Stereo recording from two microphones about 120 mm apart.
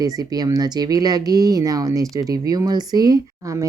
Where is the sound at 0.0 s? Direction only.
30° right (ahead or behind).